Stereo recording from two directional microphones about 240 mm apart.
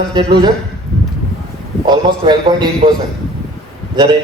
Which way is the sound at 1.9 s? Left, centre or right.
Centre.